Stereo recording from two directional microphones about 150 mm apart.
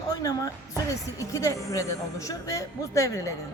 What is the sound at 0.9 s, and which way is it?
A man's voice, 20° left (ahead or behind).